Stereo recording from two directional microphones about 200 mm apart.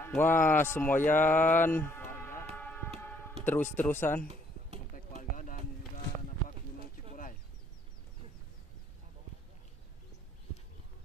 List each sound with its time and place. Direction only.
0.0 s speech: 10° left (ahead or behind)
2.5 s music: 10° left (ahead or behind)
3.4 s speech: 10° left (ahead or behind)
4.9 s a sound: 40° left (ahead or behind)